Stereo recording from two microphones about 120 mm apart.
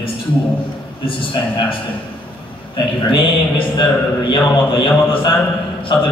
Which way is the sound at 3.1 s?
40° left (ahead or behind).